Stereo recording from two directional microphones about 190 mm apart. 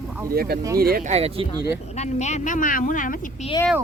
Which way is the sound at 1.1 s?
30° right (ahead or behind).